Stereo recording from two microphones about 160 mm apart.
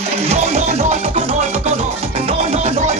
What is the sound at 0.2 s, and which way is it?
Music, 40° right (ahead or behind).